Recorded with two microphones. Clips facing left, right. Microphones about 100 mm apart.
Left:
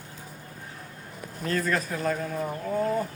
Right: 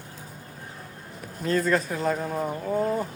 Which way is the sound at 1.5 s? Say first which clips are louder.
Right 4 dB; 20° right (ahead or behind).